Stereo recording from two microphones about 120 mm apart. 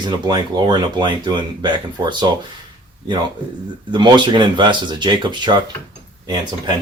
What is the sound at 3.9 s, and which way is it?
Speech, 40° right (ahead or behind).